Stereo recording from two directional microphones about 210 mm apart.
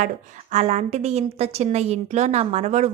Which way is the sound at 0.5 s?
30° right (ahead or behind).